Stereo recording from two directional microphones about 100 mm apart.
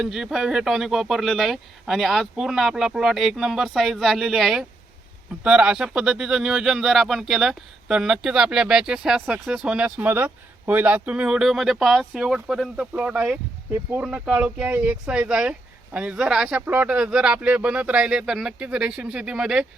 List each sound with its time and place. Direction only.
0.0 s speech: 5° right (ahead or behind)